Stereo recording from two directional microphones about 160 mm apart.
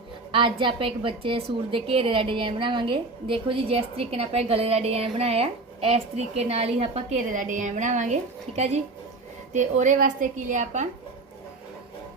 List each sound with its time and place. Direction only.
0.3 s a woman's voice: 30° right (ahead or behind)
7.3 s a woman's voice: 55° right (ahead or behind)
9.5 s a woman's voice: 50° right (ahead or behind)